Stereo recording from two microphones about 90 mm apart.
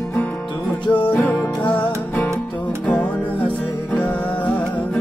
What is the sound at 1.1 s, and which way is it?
Music, 20° left (ahead or behind).